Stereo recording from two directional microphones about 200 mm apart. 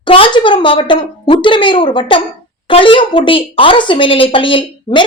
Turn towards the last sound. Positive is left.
turn(degrees=25)  # may be behind; listen again after turning